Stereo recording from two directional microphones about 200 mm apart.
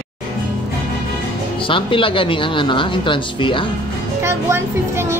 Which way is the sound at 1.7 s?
25° left (ahead or behind).